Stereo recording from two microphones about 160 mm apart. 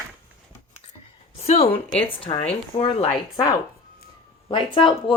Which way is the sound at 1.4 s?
40° left (ahead or behind).